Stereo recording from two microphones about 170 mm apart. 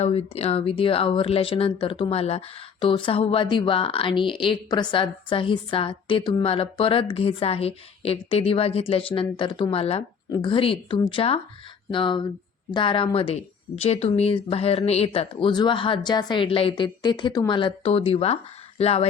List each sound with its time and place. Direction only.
0.0 s a woman's voice: 35° left (ahead or behind)